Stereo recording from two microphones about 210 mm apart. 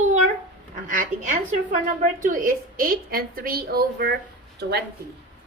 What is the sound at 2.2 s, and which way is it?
A woman's voice, 40° right (ahead or behind).